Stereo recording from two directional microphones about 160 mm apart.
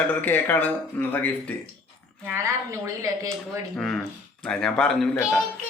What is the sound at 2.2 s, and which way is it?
A woman's voice, 15° right (ahead or behind).